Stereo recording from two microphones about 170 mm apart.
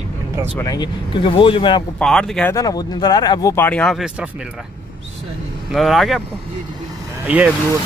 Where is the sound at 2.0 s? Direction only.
5° left (ahead or behind).